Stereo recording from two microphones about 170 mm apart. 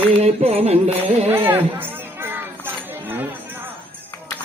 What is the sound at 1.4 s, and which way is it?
Chatter, 15° right (ahead or behind).